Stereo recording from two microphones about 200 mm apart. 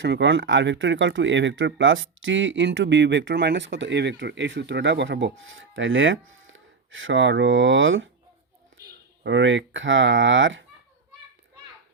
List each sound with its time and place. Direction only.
0.0 s speech: 65° right (ahead or behind)
9.2 s speech: 65° right (ahead or behind)